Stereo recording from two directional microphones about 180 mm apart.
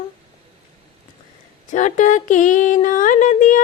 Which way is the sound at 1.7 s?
40° left (ahead or behind).